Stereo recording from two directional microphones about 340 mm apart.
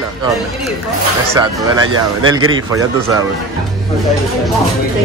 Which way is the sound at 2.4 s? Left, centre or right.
Right.